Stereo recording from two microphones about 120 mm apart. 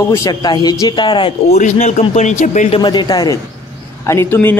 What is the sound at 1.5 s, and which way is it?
A man's voice, 70° left (ahead or behind).